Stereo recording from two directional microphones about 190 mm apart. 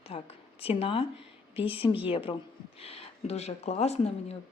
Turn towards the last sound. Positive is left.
turn(degrees=35)  # may be behind; listen again after turning